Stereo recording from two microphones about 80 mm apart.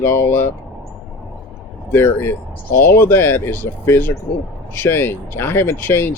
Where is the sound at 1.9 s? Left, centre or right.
Left.